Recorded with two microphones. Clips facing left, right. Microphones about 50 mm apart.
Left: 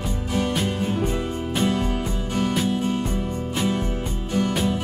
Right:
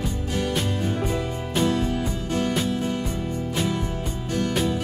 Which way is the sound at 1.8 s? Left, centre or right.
Left.